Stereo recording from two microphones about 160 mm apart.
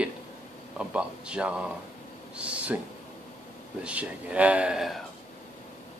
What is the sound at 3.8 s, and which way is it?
Speech, 10° right (ahead or behind).